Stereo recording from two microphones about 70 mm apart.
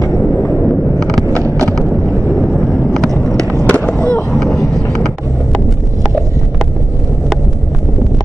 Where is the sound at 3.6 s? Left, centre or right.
Left.